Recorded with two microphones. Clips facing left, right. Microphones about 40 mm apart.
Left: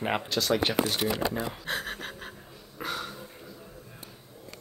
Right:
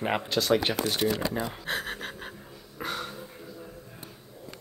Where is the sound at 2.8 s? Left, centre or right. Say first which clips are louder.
Even; centre.